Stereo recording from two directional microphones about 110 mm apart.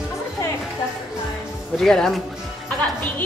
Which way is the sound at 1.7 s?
Centre (ahead or behind).